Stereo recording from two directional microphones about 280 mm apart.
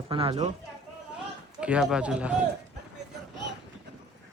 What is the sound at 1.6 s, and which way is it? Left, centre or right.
Speech, centre.